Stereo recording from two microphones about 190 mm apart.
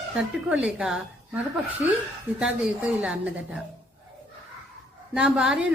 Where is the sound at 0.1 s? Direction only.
5° right (ahead or behind).